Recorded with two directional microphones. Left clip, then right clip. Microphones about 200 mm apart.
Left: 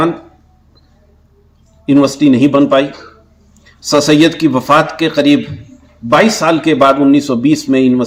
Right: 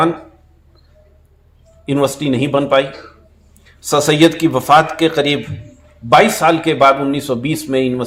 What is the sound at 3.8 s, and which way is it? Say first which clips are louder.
A man's voice: left 2 dB; 20° right (ahead or behind).